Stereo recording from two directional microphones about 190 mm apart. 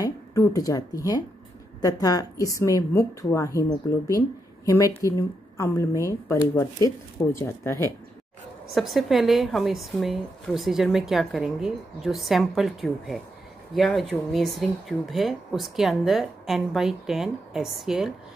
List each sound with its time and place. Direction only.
0.0 s a woman's voice: 15° left (ahead or behind)
8.7 s speech: centre (ahead or behind)